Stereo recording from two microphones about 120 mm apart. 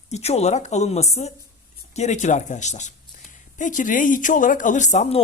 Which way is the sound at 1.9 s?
80° left.